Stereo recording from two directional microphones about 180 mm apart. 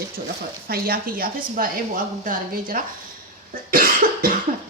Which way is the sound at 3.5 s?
50° right (ahead or behind).